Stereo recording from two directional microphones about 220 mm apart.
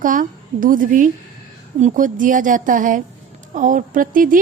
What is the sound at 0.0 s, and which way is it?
A woman's voice, 35° right (ahead or behind).